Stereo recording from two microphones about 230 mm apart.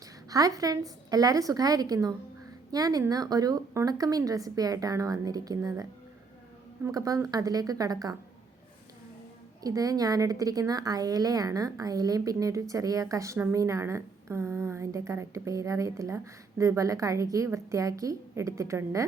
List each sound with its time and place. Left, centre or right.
0.3 s a woman's voice: centre
9.6 s a woman's voice: centre